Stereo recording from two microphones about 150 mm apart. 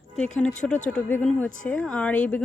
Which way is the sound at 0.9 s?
10° left (ahead or behind).